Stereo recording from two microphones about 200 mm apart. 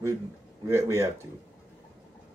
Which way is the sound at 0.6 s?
15° right (ahead or behind).